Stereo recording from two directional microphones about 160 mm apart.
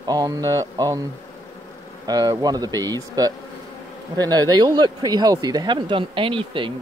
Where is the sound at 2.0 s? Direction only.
25° right (ahead or behind).